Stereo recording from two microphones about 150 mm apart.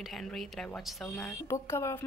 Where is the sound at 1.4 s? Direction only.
20° left (ahead or behind).